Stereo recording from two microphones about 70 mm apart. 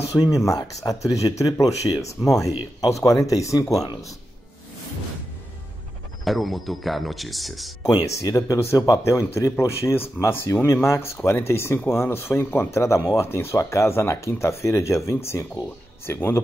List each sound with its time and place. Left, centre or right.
0.1 s speech: left
0.6 s speech: left
6.2 s speech: centre
8.2 s speech: left